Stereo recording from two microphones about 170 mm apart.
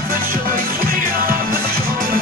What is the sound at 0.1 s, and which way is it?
Music, 60° right (ahead or behind).